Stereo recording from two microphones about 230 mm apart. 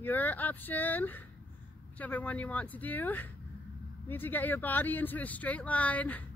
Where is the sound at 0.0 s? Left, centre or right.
Centre.